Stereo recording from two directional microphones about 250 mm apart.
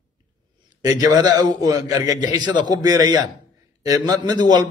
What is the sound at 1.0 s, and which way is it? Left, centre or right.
A man's voice, centre.